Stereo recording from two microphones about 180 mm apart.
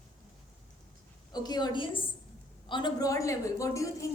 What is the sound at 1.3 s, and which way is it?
A woman's voice, 20° left (ahead or behind).